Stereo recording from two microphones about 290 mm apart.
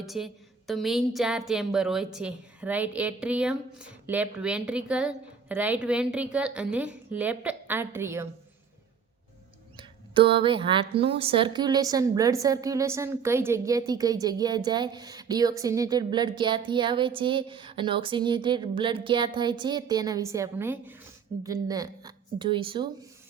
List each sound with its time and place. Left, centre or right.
0.0 s a woman's voice: centre
9.7 s speech: centre